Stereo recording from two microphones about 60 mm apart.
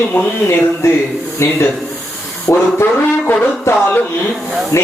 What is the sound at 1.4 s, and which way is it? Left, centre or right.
Speech, left.